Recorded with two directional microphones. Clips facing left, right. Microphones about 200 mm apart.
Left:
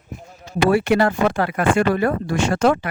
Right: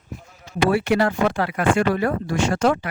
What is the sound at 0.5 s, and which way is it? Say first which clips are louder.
Speech: left 2 dB; 50° left (ahead or behind).